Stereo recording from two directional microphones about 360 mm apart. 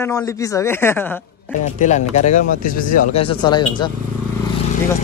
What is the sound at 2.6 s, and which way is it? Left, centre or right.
Speech, left.